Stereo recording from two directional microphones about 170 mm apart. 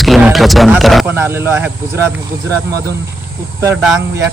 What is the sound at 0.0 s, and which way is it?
Music, centre (ahead or behind).